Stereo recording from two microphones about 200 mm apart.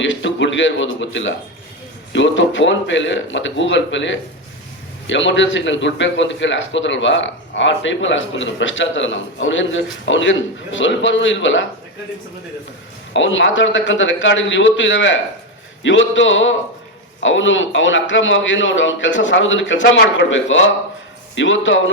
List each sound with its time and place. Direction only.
0.0 s a man's voice: 65° left (ahead or behind)
13.1 s a man's voice: 70° left (ahead or behind)